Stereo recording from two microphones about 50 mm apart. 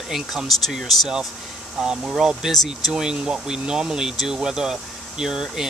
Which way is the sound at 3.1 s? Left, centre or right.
Centre.